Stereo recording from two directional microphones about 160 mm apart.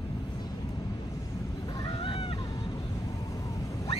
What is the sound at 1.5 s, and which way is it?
Goose, 25° left (ahead or behind).